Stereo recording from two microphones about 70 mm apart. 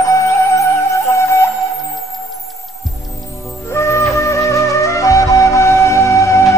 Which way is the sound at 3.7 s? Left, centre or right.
Left.